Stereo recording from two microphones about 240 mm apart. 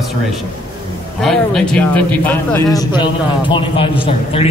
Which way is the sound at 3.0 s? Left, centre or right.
Centre.